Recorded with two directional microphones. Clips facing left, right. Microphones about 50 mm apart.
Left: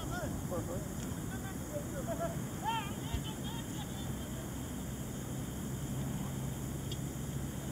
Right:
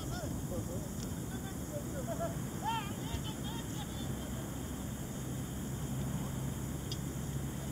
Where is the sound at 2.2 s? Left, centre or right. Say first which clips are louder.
Even; centre.